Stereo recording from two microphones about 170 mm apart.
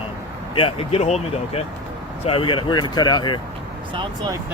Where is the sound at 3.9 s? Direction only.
25° right (ahead or behind).